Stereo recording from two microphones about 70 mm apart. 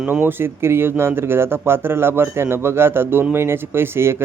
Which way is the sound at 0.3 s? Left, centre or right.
Right.